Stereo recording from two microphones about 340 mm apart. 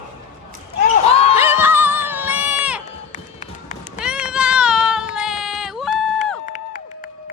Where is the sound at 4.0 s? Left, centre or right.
Centre.